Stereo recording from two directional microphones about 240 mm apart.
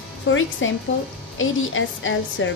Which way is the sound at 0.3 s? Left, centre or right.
Left.